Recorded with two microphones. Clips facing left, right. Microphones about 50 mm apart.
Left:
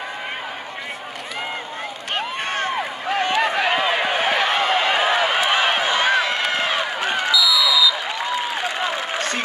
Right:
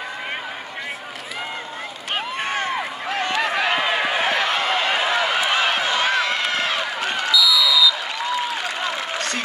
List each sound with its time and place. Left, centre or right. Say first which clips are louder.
2.1 s run: even; centre
3.3 s a sound: left 2 dB; left
3.7 s run: left 1 dB; centre
4.2 s a sound: left 1 dB; left
5.5 s run: left 1 dB; left
7.3 s basketball bounce: right 2 dB; centre
8.5 s applause: left 2 dB; left